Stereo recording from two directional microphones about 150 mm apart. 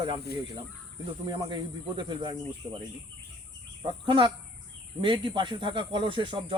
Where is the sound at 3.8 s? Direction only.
35° right (ahead or behind).